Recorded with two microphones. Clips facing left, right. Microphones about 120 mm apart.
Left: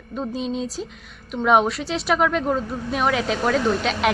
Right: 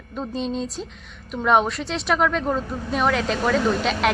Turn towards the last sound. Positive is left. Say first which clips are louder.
# even
turn(degrees=0)  # may be behind; listen again after turning